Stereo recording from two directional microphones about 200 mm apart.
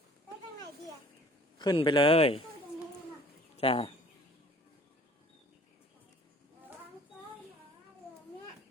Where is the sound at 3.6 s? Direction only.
30° left (ahead or behind).